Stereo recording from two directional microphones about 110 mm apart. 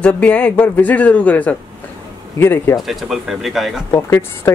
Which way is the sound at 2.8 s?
Centre (ahead or behind).